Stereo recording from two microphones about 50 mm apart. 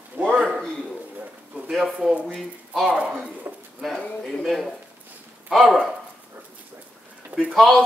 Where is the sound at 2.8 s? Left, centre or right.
Right.